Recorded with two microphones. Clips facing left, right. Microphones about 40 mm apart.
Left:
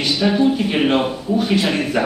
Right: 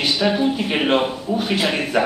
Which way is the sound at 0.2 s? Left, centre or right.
Centre.